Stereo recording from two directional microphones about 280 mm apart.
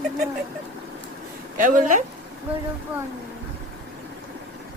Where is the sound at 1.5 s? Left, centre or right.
Right.